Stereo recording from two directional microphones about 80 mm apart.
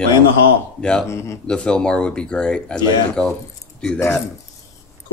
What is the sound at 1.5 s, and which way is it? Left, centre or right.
A man's voice, centre.